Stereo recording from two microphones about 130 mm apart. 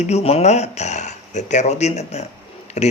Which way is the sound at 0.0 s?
55° left (ahead or behind).